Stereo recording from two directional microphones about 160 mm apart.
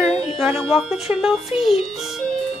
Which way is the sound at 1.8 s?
Centre (ahead or behind).